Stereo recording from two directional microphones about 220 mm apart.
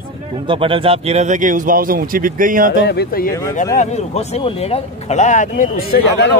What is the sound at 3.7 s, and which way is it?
Speech, 30° left (ahead or behind).